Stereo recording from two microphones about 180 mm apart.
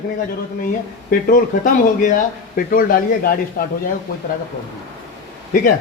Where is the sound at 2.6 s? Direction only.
50° left (ahead or behind).